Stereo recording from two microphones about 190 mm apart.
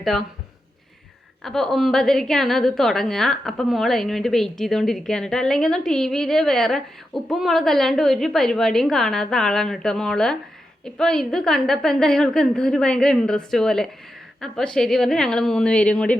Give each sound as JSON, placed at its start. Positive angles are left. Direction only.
{"t": 0.0, "sound": "speech", "side_deg": 0}
{"t": 1.5, "sound": "a woman's voice", "side_deg": 0}